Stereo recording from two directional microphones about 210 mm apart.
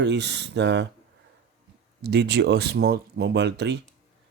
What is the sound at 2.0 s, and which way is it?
Speech, 50° right (ahead or behind).